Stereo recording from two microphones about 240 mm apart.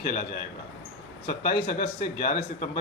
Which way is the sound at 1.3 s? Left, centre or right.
Left.